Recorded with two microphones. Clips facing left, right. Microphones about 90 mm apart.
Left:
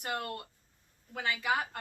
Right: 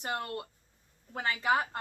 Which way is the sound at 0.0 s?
30° right (ahead or behind).